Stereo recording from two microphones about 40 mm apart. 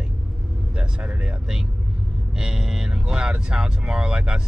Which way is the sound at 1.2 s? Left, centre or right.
Centre.